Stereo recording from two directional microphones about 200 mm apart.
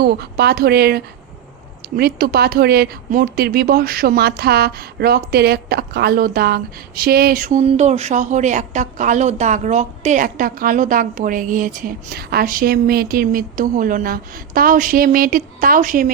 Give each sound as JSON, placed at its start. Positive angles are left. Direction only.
{"t": 0.0, "sound": "speech", "side_deg": -55}